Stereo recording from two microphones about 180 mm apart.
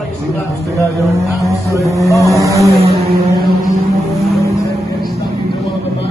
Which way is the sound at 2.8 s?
35° right (ahead or behind).